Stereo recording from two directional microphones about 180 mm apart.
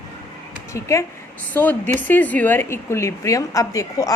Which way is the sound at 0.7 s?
15° left (ahead or behind).